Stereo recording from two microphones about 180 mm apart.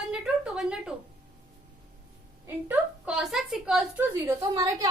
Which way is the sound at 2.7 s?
5° right (ahead or behind).